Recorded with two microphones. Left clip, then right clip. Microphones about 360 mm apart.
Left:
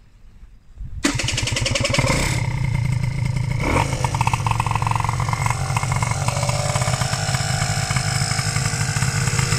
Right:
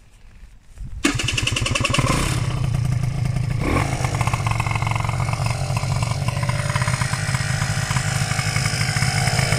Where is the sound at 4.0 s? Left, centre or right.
Centre.